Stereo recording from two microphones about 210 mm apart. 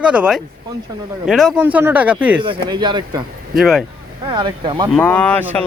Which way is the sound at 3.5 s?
Centre (ahead or behind).